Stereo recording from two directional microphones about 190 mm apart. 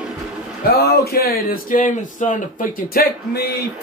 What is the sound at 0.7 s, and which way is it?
Speech, 55° left (ahead or behind).